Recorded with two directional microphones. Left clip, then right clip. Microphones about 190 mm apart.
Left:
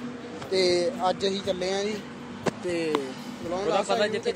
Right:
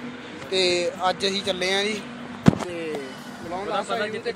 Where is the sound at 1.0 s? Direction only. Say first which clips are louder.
Right 2 dB; 10° left (ahead or behind).